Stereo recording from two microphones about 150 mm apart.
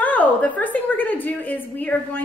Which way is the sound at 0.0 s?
10° left (ahead or behind).